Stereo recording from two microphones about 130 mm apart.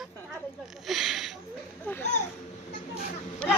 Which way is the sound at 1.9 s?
15° left (ahead or behind).